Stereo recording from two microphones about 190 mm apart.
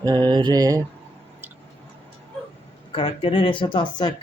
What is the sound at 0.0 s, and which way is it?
Mantra, 20° right (ahead or behind).